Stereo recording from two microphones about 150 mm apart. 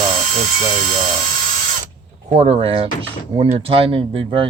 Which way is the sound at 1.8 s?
45° right (ahead or behind).